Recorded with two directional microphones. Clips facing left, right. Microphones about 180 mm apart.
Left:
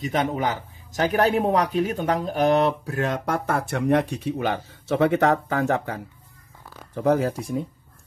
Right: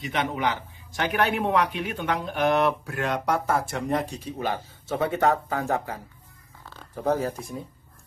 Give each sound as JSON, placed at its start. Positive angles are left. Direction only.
{"t": 0.0, "sound": "speech", "side_deg": 45}